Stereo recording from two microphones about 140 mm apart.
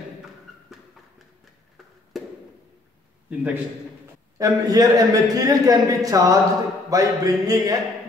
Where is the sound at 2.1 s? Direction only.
Centre (ahead or behind).